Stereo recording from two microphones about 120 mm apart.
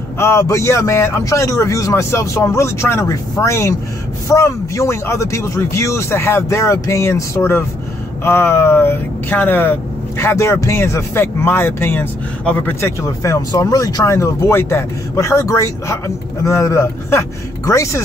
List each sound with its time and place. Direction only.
0.2 s speech: 25° left (ahead or behind)
13.2 s speech: 30° left (ahead or behind)